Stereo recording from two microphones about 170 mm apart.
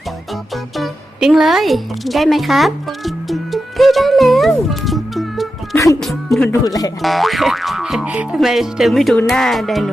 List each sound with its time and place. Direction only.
0.5 s music: centre (ahead or behind)
5.7 s music: 20° left (ahead or behind)
6.5 s speech: 20° left (ahead or behind)
7.0 s speech: centre (ahead or behind)